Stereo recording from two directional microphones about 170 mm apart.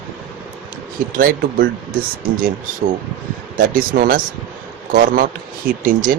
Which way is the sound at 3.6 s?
55° right (ahead or behind).